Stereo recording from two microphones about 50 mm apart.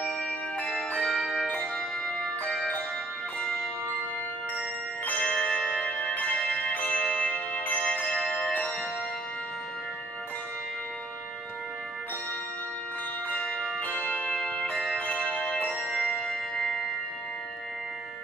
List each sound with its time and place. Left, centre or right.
1.0 s bell: centre
1.5 s music: centre
5.3 s bell: centre
5.6 s music: centre
6.0 s music: left
7.0 s music: centre
7.2 s music: left
7.8 s music: centre
13.4 s church bell: left
13.7 s music: left
14.3 s music: centre
15.0 s music: left
15.8 s music: centre